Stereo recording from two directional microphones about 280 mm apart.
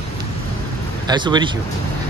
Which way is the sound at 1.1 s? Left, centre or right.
Centre.